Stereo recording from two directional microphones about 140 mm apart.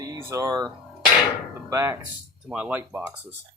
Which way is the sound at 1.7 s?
20° right (ahead or behind).